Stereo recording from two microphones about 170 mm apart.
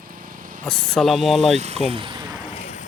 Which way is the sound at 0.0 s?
55° right (ahead or behind).